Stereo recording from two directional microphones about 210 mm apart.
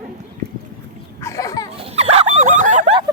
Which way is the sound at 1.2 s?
15° left (ahead or behind).